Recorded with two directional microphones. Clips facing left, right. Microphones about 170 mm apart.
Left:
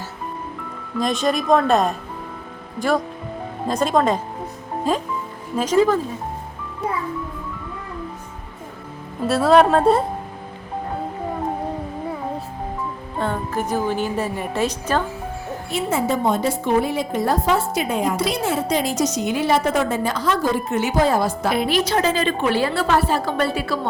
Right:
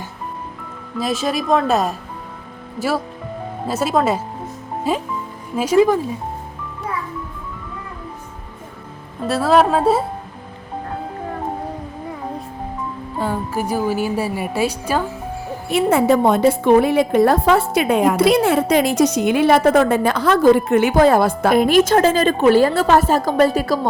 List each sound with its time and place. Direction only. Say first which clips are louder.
0.9 s a woman's voice: even; 5° right (ahead or behind)
9.2 s speech: left 1 dB; centre (ahead or behind)
13.1 s a woman's voice: right 1 dB; 5° right (ahead or behind)
15.7 s a woman's voice: right 7 dB; 60° right (ahead or behind); by 23.9 s 40° right (ahead or behind)